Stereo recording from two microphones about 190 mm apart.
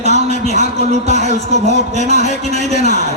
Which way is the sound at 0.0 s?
35° left (ahead or behind).